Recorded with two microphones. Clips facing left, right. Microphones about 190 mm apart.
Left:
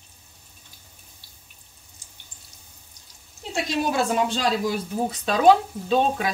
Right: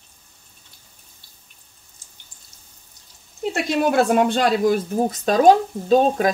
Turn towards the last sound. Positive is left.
turn(degrees=-40)  # may be behind; listen again after turning